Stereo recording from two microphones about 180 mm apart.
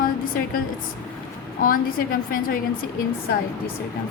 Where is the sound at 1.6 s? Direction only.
50° left (ahead or behind).